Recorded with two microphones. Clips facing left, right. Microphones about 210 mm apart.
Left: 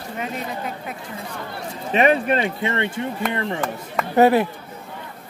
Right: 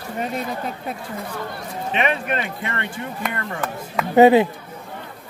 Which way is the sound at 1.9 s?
40° left (ahead or behind).